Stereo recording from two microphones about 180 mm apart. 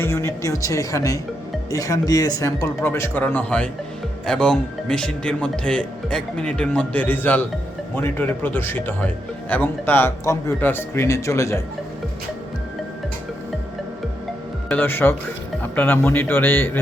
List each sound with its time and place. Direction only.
0.0 s a man's voice: 15° left (ahead or behind)
14.7 s a man's voice: 10° left (ahead or behind)